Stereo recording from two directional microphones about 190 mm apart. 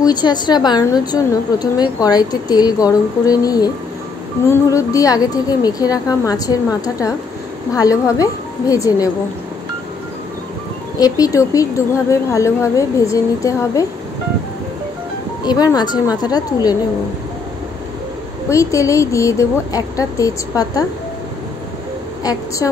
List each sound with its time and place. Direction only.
0.0 s a woman's voice: 20° left (ahead or behind)
11.0 s speech: 20° left (ahead or behind)
15.4 s a woman's voice: 20° left (ahead or behind)
18.5 s speech: 15° left (ahead or behind)
22.2 s a woman's voice: 20° left (ahead or behind)